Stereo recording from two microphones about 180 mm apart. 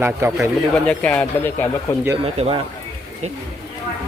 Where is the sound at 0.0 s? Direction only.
15° right (ahead or behind).